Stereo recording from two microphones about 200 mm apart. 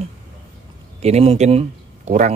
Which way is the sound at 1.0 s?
30° right (ahead or behind).